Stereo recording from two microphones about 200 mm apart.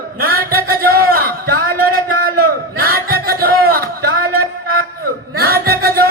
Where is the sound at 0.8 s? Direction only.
50° right (ahead or behind).